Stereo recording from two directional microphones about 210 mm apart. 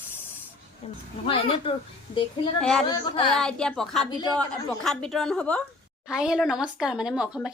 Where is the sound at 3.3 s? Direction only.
5° left (ahead or behind).